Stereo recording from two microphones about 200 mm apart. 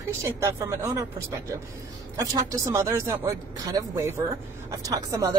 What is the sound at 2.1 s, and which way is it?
Speech, 15° right (ahead or behind).